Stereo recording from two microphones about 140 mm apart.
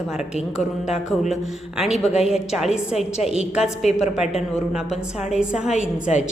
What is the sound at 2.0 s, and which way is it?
Speech, 50° left (ahead or behind).